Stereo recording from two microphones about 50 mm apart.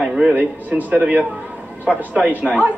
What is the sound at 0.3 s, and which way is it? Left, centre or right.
A woman's voice, right.